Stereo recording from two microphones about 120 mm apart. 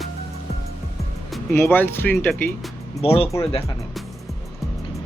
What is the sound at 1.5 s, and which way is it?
Speech, 15° left (ahead or behind).